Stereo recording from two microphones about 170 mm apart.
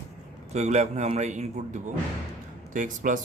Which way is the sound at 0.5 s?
40° right (ahead or behind).